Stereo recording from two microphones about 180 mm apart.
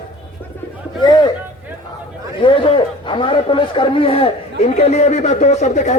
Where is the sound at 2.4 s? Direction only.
25° left (ahead or behind).